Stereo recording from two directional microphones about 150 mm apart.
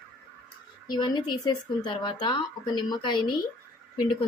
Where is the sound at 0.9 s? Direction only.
30° left (ahead or behind).